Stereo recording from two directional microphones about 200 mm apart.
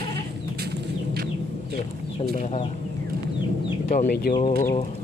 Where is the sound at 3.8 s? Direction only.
45° left (ahead or behind).